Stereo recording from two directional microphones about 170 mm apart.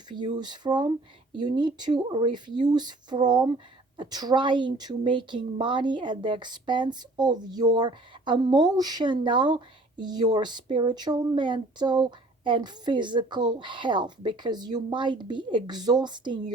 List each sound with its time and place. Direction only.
0.3 s a woman's voice: 25° right (ahead or behind)